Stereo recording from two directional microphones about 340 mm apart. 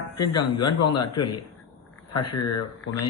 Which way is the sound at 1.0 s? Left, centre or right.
Centre.